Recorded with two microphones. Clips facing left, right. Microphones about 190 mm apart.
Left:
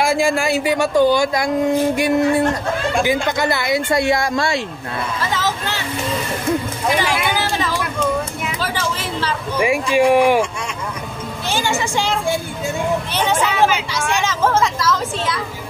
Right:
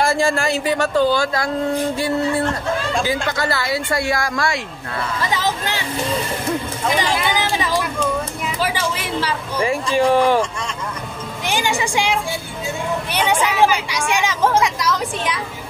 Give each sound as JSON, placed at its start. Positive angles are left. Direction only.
{"t": 0.0, "sound": "speech", "side_deg": 10}
{"t": 5.2, "sound": "speech", "side_deg": -15}
{"t": 7.1, "sound": "speech", "side_deg": 10}
{"t": 7.3, "sound": "a sound", "side_deg": -15}
{"t": 9.6, "sound": "speech", "side_deg": 10}
{"t": 11.4, "sound": "speech", "side_deg": -15}